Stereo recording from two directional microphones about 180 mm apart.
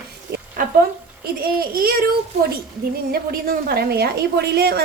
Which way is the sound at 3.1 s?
55° right (ahead or behind).